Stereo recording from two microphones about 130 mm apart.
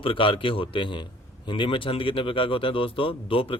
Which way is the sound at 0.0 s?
45° left (ahead or behind).